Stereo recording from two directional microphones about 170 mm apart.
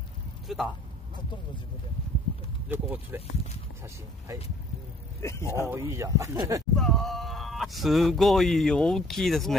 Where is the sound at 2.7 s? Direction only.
10° right (ahead or behind).